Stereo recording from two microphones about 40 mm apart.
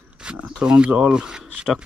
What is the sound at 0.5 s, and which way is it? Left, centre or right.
Speech, right.